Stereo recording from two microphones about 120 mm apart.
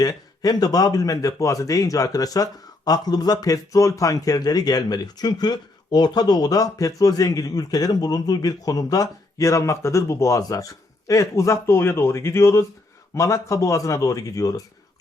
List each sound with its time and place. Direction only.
0.0 s speech: 30° left (ahead or behind)